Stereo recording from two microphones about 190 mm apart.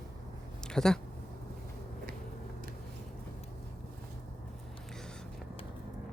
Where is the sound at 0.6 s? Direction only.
5° left (ahead or behind).